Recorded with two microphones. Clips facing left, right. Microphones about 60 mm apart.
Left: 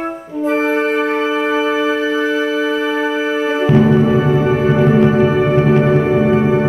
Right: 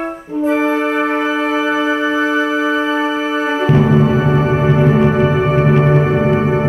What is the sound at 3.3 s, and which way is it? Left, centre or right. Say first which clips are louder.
Music: even; right.